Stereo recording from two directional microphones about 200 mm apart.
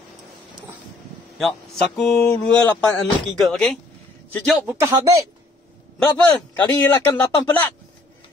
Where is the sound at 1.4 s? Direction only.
5° left (ahead or behind).